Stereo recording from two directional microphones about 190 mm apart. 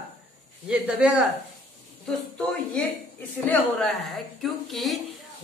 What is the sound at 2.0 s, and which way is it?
A woman's voice, 5° left (ahead or behind).